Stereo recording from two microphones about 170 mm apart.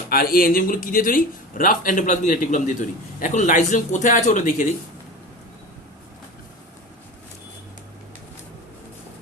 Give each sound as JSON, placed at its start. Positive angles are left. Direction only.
{"t": 0.1, "sound": "a man's voice", "side_deg": 60}